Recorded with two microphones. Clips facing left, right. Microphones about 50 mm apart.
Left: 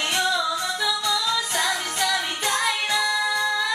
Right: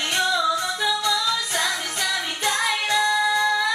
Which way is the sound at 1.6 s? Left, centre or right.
Left.